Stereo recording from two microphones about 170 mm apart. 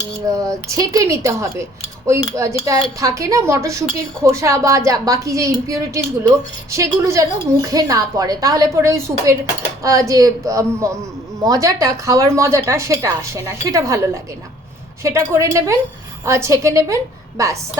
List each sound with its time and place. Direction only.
0.3 s a woman's voice: 20° right (ahead or behind)